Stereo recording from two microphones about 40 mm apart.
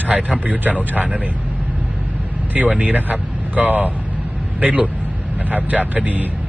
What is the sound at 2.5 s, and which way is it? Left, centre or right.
Speech, right.